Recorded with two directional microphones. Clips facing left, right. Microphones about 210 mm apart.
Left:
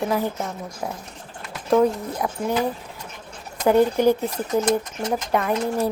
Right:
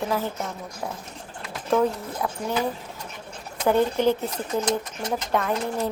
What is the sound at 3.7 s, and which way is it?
Speech, 10° left (ahead or behind).